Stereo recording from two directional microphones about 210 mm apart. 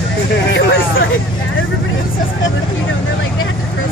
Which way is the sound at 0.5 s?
55° left (ahead or behind).